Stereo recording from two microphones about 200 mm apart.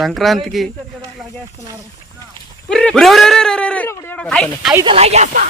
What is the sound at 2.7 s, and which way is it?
Speech, 5° left (ahead or behind).